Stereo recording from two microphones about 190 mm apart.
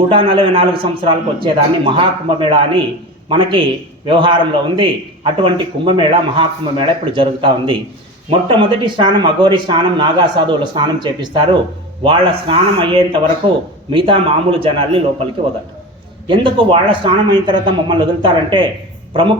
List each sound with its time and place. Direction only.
0.1 s speech: 25° right (ahead or behind)
16.2 s speech: 25° right (ahead or behind)